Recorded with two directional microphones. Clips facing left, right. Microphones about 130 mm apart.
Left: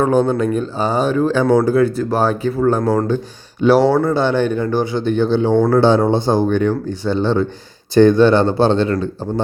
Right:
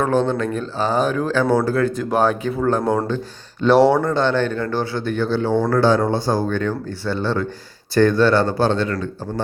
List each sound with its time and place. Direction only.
0.0 s speech: 10° left (ahead or behind)
1.5 s speech: 10° left (ahead or behind)
2.8 s speech: 10° right (ahead or behind)
3.6 s speech: 5° left (ahead or behind); by 9.0 s 30° left (ahead or behind)